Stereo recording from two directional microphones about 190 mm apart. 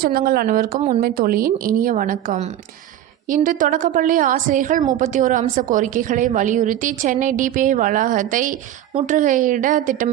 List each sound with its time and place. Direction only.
0.0 s a woman's voice: 50° right (ahead or behind)
0.8 s speech: 35° right (ahead or behind)
1.0 s a woman's voice: 50° right (ahead or behind)